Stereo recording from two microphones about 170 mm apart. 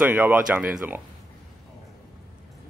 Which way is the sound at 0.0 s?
10° right (ahead or behind).